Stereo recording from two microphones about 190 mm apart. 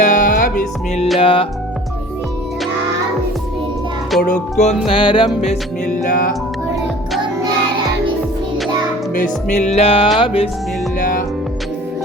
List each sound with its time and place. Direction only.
0.0 s music: 45° left (ahead or behind)
1.2 s music: 25° left (ahead or behind)
4.2 s music: 40° left (ahead or behind)
4.9 s music: 25° left (ahead or behind)
6.1 s music: 45° left (ahead or behind)
9.1 s music: 40° left (ahead or behind)